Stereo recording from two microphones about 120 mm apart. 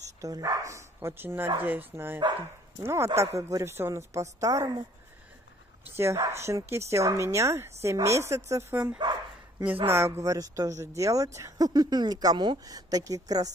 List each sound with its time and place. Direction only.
0.2 s speech: 25° right (ahead or behind)
5.9 s speech: 20° right (ahead or behind)